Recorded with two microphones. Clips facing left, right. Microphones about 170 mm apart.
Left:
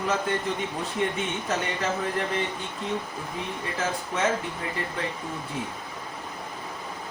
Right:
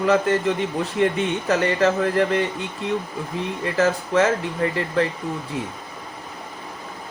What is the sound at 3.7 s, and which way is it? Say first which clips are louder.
Speech: right 11 dB; 75° right (ahead or behind).